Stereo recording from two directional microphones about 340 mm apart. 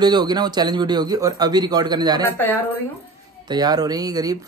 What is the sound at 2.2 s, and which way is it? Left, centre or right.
Speech, centre.